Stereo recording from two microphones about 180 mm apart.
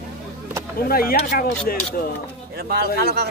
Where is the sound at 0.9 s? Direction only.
55° left (ahead or behind).